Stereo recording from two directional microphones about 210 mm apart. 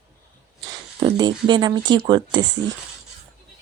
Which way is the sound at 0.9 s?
20° right (ahead or behind).